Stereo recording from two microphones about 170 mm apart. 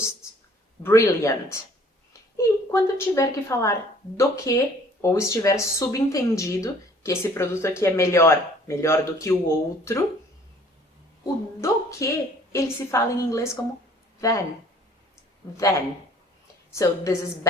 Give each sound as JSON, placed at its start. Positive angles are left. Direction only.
{"t": 0.8, "sound": "speech", "side_deg": 15}
{"t": 11.2, "sound": "a sound", "side_deg": 15}
{"t": 12.9, "sound": "speech", "side_deg": 15}
{"t": 16.7, "sound": "speech", "side_deg": 15}